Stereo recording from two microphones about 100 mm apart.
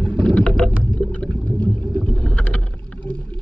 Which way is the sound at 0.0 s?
10° left (ahead or behind).